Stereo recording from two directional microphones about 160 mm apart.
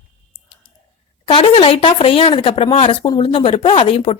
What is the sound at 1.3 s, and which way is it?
Speech, 35° left (ahead or behind).